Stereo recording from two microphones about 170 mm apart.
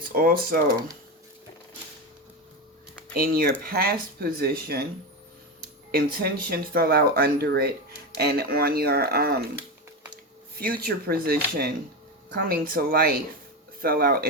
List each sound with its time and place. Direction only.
0.1 s speech: 60° right (ahead or behind)
3.2 s speech: 60° right (ahead or behind)
5.9 s speech: 65° right (ahead or behind)
10.6 s speech: 60° right (ahead or behind)